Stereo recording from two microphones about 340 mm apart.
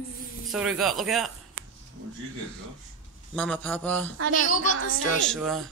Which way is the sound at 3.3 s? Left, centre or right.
Centre.